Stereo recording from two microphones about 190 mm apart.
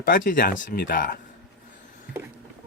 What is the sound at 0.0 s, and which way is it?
Speech, 45° left (ahead or behind).